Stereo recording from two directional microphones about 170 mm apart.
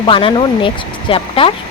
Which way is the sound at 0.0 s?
30° left (ahead or behind).